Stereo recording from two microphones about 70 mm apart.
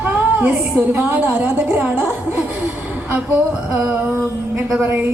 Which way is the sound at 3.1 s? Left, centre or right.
Centre.